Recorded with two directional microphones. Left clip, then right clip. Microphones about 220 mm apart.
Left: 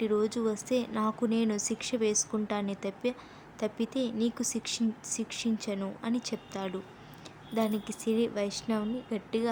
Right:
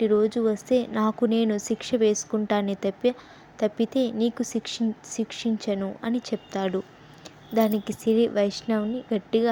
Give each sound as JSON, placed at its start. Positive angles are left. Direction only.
{"t": 0.0, "sound": "speech", "side_deg": -20}